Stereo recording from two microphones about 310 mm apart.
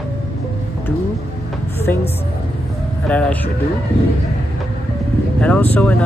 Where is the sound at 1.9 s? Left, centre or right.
Centre.